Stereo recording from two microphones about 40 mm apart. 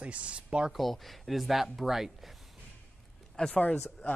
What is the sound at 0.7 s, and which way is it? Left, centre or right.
Speech, centre.